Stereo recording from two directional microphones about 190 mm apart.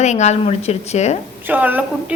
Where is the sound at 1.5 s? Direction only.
10° right (ahead or behind).